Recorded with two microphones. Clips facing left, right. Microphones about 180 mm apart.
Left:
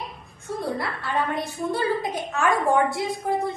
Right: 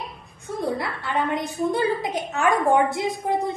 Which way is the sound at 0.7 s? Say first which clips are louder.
Even; 20° right (ahead or behind).